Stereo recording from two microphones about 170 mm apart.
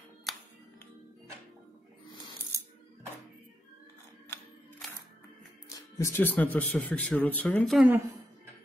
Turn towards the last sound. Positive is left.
turn(degrees=0)  # may be behind; listen again after turning